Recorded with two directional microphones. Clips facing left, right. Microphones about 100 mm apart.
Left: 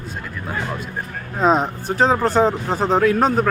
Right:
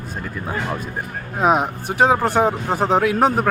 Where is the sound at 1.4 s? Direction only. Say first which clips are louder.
Even; 10° right (ahead or behind).